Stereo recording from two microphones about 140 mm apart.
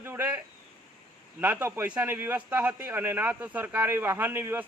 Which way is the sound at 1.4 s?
15° right (ahead or behind).